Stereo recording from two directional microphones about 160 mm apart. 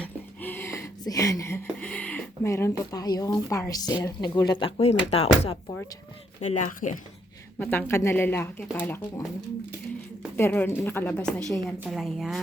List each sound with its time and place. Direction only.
0.0 s a sound: 10° left (ahead or behind)
2.5 s a woman's voice: 15° left (ahead or behind); by 5.5 s 35° left (ahead or behind)
6.4 s speech: 50° left (ahead or behind)
7.6 s speech: 10° left (ahead or behind)
10.3 s a woman's voice: 10° left (ahead or behind)